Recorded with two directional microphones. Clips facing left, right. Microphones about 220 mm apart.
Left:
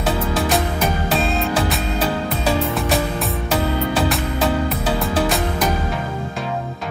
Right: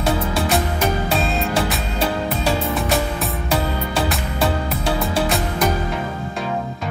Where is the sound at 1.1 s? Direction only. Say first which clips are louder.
Left 1 dB; centre (ahead or behind).